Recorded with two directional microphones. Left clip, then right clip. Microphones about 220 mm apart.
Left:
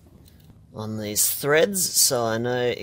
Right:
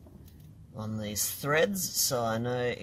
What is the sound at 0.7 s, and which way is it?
Speech, 45° left (ahead or behind).